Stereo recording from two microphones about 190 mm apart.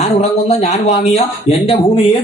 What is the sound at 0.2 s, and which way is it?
A man's voice, 35° left (ahead or behind).